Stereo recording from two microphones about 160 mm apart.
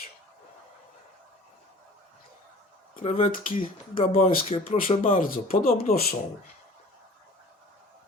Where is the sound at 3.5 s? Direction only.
60° left (ahead or behind); by 4.7 s 40° left (ahead or behind).